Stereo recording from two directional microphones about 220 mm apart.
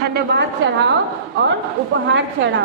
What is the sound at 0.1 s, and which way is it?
Speech, 45° right (ahead or behind).